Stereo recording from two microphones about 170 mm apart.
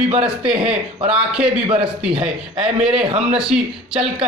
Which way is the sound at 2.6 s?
5° right (ahead or behind).